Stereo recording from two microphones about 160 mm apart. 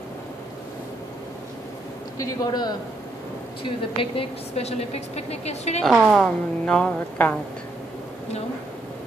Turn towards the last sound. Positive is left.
turn(degrees=10)  # may be behind; listen again after turning